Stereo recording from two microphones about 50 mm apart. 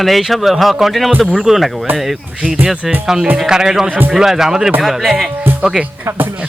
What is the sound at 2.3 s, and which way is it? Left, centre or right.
Speech, centre.